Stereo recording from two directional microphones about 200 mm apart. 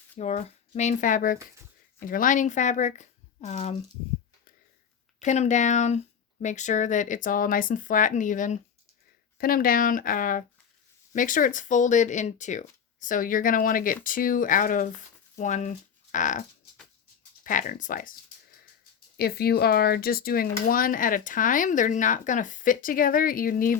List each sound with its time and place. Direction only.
0.2 s speech: 35° left (ahead or behind)
5.2 s speech: 35° left (ahead or behind)